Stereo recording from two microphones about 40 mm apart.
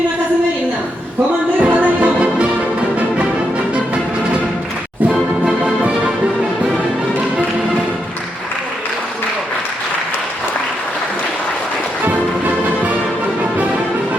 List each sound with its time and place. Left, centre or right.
1.6 s music: right
12.0 s music: right